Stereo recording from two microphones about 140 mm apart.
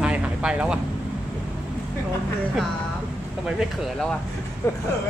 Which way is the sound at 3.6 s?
5° left (ahead or behind).